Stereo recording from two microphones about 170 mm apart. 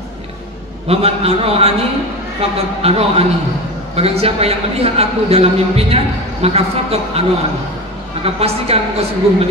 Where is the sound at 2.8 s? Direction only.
35° right (ahead or behind).